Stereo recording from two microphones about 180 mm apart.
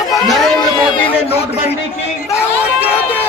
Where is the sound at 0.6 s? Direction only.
30° left (ahead or behind).